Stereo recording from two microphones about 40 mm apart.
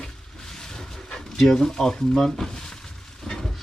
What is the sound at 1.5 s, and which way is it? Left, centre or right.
Speech, centre.